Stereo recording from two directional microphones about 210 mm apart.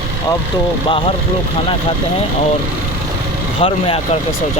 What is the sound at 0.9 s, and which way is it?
Speech, 25° left (ahead or behind).